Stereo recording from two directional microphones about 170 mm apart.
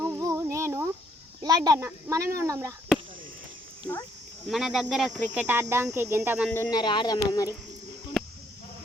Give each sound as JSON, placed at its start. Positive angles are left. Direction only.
{"t": 0.0, "sound": "a sound", "side_deg": -20}
{"t": 1.4, "sound": "speech", "side_deg": -20}
{"t": 4.4, "sound": "speech", "side_deg": 0}
{"t": 6.5, "sound": "speech", "side_deg": 15}
{"t": 6.7, "sound": "speech", "side_deg": 25}